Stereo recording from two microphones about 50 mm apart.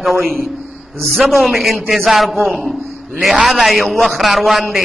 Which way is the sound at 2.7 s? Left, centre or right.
Centre.